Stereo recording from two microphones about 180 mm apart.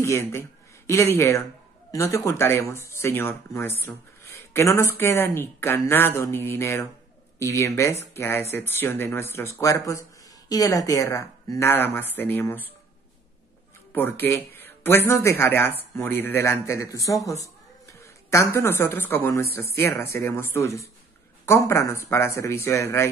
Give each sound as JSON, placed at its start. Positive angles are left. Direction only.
{"t": 0.0, "sound": "speech", "side_deg": 15}
{"t": 13.9, "sound": "speech", "side_deg": 10}